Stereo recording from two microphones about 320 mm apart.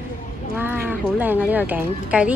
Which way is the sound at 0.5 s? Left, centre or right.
Centre.